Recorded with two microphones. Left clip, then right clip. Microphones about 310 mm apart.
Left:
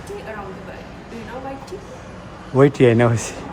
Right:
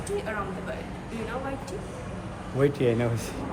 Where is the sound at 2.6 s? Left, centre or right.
Left.